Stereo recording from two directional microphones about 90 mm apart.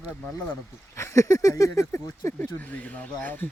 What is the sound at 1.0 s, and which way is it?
Speech, 35° left (ahead or behind).